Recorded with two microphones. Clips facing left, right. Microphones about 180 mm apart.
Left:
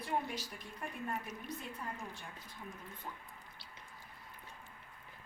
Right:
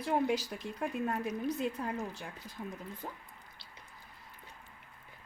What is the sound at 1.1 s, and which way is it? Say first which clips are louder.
Speech: right 8 dB; 75° right (ahead or behind).